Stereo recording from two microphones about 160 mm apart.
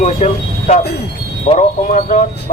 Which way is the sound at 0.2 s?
45° left (ahead or behind).